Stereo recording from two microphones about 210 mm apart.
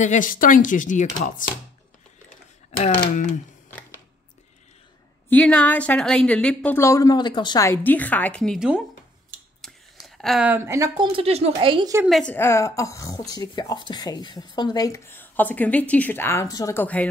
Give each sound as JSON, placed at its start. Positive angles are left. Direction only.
{"t": 0.0, "sound": "speech", "side_deg": 35}
{"t": 2.8, "sound": "speech", "side_deg": 35}
{"t": 5.3, "sound": "speech", "side_deg": 5}
{"t": 7.8, "sound": "a woman's voice", "side_deg": 10}
{"t": 12.0, "sound": "speech", "side_deg": 0}